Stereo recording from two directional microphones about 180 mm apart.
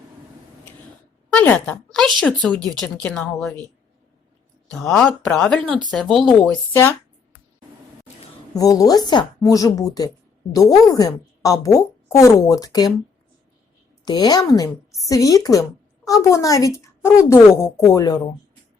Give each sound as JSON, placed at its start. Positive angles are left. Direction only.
{"t": 1.3, "sound": "a woman's voice", "side_deg": 10}
{"t": 4.7, "sound": "speech", "side_deg": 5}
{"t": 8.5, "sound": "a woman's voice", "side_deg": 20}
{"t": 14.0, "sound": "a woman's voice", "side_deg": 20}